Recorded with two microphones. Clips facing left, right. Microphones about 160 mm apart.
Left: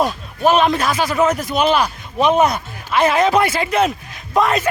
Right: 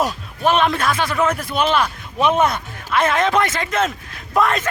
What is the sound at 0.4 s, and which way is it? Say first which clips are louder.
A man's voice: left 2 dB; 5° left (ahead or behind).